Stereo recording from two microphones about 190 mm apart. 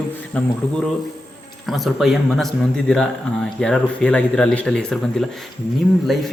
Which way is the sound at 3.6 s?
5° left (ahead or behind).